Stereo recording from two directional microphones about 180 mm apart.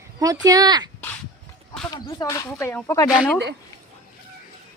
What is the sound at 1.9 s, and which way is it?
Speech, 20° left (ahead or behind).